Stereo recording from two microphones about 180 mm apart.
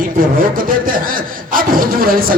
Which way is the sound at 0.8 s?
50° right (ahead or behind).